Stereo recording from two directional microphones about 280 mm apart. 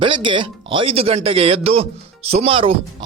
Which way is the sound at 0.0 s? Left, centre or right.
Centre.